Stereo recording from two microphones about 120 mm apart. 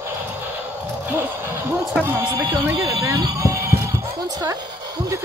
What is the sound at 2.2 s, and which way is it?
Speech, 40° right (ahead or behind).